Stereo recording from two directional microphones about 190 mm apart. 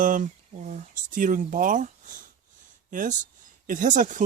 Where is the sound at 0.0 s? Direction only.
40° right (ahead or behind).